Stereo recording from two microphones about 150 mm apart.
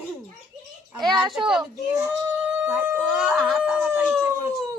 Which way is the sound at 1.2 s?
Centre (ahead or behind).